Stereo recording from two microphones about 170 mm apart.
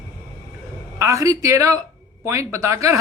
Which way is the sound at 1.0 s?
20° right (ahead or behind).